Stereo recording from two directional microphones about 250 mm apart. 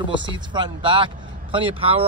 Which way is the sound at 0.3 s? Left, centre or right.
Centre.